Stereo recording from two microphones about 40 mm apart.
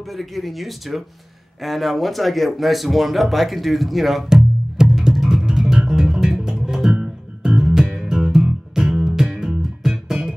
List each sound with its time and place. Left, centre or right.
0.0 s speech: centre
4.8 s music: centre
5.1 s bass guitar: centre
8.1 s music: centre